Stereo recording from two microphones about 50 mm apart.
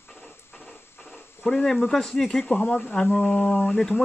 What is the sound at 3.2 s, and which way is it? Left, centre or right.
Speech, left.